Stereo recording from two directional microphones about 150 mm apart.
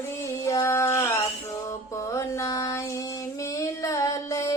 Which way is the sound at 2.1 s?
20° left (ahead or behind).